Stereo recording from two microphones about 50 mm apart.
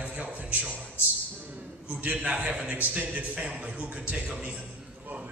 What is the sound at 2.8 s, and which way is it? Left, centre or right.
A man's voice, right.